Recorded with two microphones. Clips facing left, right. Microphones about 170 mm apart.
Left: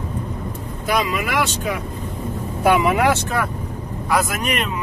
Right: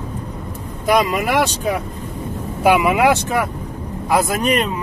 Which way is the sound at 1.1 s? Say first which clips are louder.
Right 4 dB; 40° right (ahead or behind).